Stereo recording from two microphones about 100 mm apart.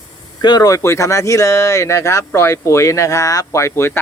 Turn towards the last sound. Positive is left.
turn(degrees=25)  # may be behind; listen again after turning